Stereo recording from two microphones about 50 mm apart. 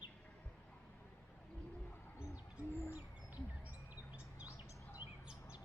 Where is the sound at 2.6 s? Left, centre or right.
Left.